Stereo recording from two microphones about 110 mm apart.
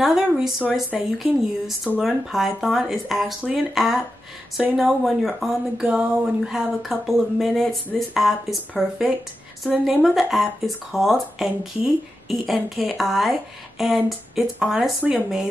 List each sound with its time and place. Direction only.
0.0 s speech: 5° right (ahead or behind)